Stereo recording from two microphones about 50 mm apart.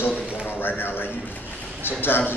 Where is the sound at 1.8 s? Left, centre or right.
Left.